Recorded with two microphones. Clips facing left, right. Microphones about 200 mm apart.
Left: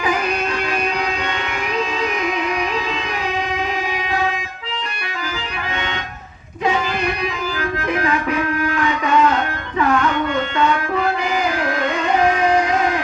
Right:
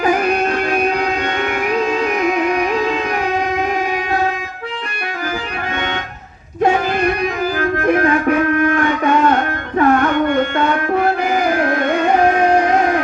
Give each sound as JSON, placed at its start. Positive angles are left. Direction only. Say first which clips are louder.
{"t": 0.0, "sound": "music", "louder": "right 5 dB", "side_deg": -50}
{"t": 2.2, "sound": "music", "louder": "right 5 dB", "side_deg": -50}
{"t": 7.6, "sound": "music", "louder": "right 6 dB", "side_deg": -50}